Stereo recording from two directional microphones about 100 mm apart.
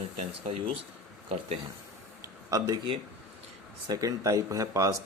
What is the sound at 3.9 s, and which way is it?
Speech, 35° right (ahead or behind).